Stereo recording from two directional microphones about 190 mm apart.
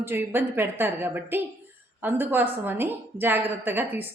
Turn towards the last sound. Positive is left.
turn(degrees=-10)  # may be behind; listen again after turning